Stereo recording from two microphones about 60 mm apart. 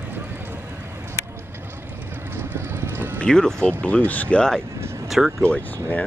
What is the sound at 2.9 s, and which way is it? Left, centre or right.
Boat, right.